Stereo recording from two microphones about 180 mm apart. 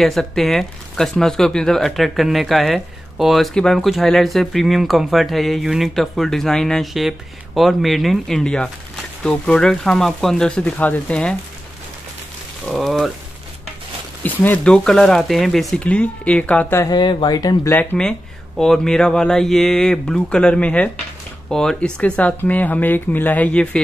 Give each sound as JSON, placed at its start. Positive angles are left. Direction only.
{"t": 0.0, "sound": "speech", "side_deg": 0}
{"t": 12.6, "sound": "speech", "side_deg": 0}
{"t": 14.2, "sound": "speech", "side_deg": 10}
{"t": 16.9, "sound": "speech", "side_deg": 25}
{"t": 17.7, "sound": "speech", "side_deg": 5}